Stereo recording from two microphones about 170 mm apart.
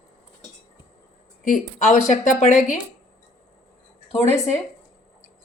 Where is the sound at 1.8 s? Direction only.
45° left (ahead or behind).